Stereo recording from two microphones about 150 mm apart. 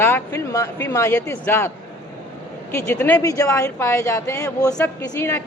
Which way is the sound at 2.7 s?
15° left (ahead or behind).